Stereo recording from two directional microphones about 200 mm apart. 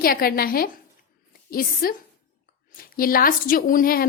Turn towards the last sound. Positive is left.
turn(degrees=45)  # may be behind; listen again after turning